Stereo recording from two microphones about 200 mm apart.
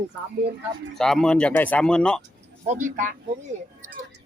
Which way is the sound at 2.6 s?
35° right (ahead or behind).